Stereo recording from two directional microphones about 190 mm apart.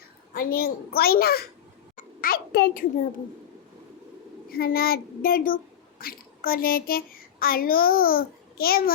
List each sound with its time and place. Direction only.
0.3 s a child's voice: 55° left (ahead or behind)
4.4 s a child's voice: 50° left (ahead or behind)